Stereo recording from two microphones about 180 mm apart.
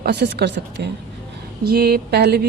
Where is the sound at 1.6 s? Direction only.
60° right (ahead or behind).